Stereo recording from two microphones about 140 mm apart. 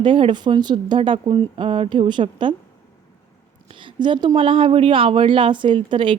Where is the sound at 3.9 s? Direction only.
35° right (ahead or behind).